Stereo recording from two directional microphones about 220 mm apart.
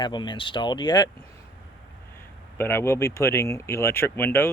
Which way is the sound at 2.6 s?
10° left (ahead or behind).